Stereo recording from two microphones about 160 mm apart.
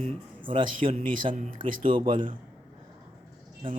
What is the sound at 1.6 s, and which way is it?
Speech, 30° right (ahead or behind).